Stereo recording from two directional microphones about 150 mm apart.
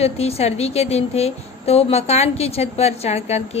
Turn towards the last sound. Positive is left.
turn(degrees=45)  # may be behind; listen again after turning